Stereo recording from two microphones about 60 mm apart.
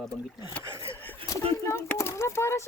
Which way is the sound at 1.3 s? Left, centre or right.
Left.